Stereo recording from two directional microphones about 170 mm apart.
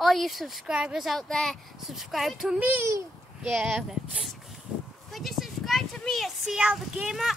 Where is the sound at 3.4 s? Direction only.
5° right (ahead or behind).